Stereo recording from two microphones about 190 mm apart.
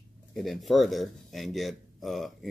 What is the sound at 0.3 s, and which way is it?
Speech, centre (ahead or behind).